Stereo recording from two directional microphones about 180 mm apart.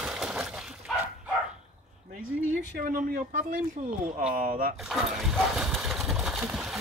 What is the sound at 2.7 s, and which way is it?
Speech, 55° right (ahead or behind).